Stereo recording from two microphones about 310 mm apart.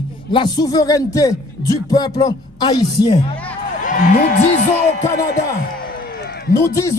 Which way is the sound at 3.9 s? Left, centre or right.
Left.